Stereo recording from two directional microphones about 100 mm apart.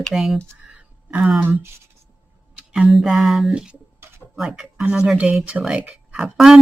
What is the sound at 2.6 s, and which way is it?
Speech, 10° right (ahead or behind).